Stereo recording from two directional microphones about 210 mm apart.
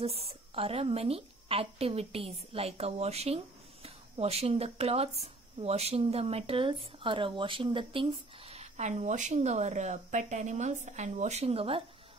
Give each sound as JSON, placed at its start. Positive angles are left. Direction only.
{"t": 0.0, "sound": "speech", "side_deg": -30}